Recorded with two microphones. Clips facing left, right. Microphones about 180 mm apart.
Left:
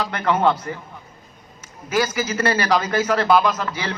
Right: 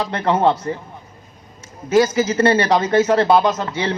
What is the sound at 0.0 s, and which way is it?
Speech, 30° right (ahead or behind).